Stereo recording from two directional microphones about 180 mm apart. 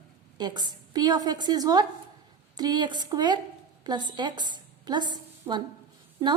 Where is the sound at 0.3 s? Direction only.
25° right (ahead or behind).